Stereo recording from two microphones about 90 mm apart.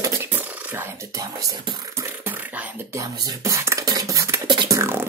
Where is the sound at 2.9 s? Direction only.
35° right (ahead or behind).